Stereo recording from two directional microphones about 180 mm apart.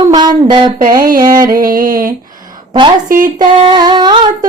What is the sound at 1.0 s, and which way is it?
Music, 50° right (ahead or behind).